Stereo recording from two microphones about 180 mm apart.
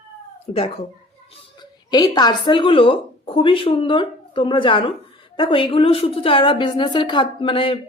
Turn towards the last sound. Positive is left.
turn(degrees=30)  # may be behind; listen again after turning